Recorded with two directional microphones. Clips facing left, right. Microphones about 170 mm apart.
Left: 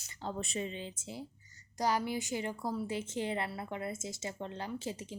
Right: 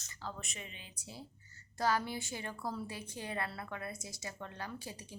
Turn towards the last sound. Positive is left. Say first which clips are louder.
# left 6 dB
turn(degrees=20)  # may be behind; listen again after turning